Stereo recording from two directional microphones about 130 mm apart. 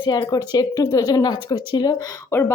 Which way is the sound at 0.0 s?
30° left (ahead or behind).